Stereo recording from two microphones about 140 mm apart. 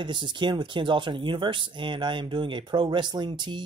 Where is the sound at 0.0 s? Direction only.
35° right (ahead or behind).